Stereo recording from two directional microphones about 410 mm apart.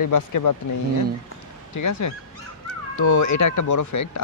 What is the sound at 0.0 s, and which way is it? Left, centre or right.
Speech, left.